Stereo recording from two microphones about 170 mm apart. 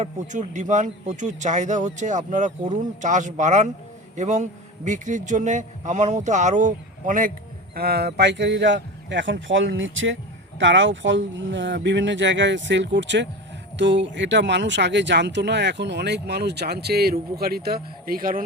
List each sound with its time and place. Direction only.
0.0 s speech: 45° right (ahead or behind)
7.8 s speech: 70° right (ahead or behind)